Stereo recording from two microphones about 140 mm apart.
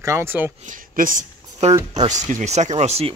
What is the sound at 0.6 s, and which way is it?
Speech, 75° right (ahead or behind).